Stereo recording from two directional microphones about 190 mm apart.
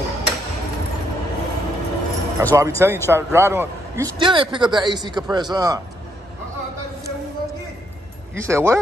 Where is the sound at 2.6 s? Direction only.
15° right (ahead or behind).